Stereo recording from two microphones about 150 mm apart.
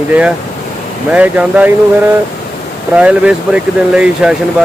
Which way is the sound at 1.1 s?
10° right (ahead or behind).